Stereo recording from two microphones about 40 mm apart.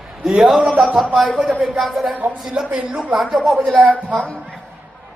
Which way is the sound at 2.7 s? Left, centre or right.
Right.